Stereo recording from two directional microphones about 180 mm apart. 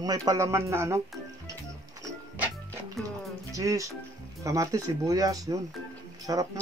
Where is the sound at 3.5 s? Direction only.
20° right (ahead or behind).